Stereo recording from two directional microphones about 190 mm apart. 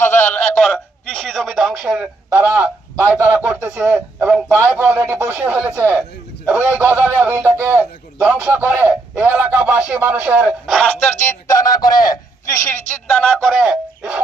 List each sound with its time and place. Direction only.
0.1 s a sound: 40° left (ahead or behind)
1.1 s a man's voice: 5° left (ahead or behind)
11.0 s speech: 40° left (ahead or behind)
11.4 s speech: 20° left (ahead or behind)
13.1 s speech: centre (ahead or behind)